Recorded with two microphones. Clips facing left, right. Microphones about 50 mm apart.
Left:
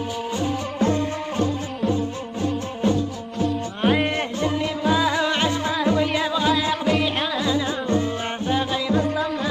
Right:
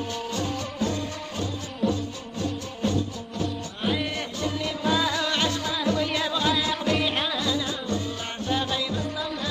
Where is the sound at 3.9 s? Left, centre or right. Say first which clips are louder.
Left 7 dB; left.